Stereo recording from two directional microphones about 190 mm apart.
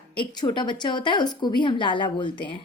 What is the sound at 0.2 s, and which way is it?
A woman's voice, 25° left (ahead or behind).